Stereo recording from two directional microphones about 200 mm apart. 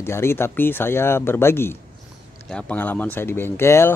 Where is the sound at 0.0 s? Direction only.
10° left (ahead or behind).